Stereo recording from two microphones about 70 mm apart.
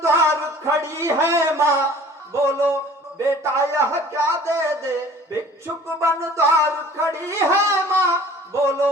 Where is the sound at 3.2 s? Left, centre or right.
Right.